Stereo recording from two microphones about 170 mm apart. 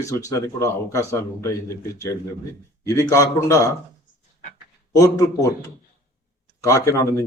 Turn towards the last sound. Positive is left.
turn(degrees=15)  # may be behind; listen again after turning